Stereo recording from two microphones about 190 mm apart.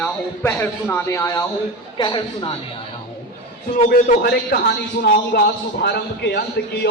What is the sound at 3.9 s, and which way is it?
A man's voice, 55° left (ahead or behind).